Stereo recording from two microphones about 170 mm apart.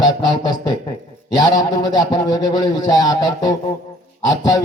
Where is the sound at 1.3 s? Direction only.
25° left (ahead or behind).